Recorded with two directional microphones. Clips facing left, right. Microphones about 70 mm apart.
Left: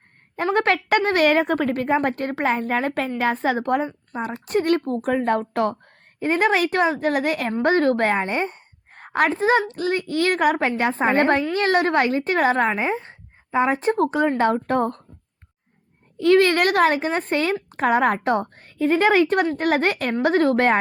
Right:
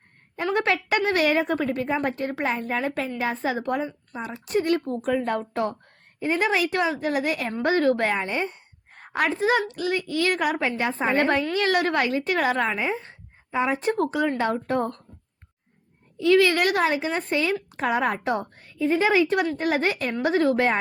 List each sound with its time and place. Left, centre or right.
0.3 s a woman's voice: left
16.1 s a woman's voice: left